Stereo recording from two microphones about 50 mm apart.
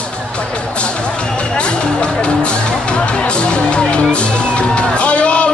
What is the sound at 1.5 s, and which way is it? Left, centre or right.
Speech, centre.